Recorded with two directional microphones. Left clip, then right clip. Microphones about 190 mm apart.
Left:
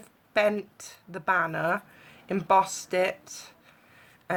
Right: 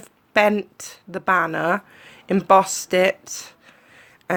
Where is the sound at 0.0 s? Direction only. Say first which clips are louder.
Right 7 dB; 40° right (ahead or behind).